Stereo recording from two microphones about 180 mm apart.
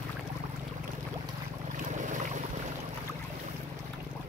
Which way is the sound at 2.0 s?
45° right (ahead or behind).